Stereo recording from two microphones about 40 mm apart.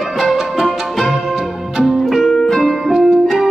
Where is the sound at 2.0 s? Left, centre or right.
Centre.